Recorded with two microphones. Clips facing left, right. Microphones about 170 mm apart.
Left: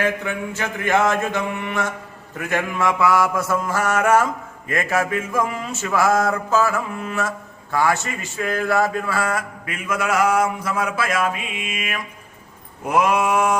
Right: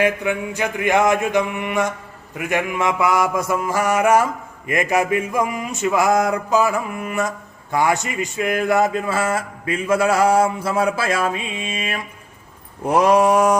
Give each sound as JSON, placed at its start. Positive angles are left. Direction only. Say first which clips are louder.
{"t": 0.0, "sound": "mantra", "louder": "right 3 dB", "side_deg": -15}